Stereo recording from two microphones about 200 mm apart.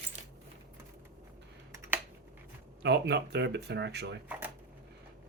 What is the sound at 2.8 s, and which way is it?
Speech, 60° right (ahead or behind).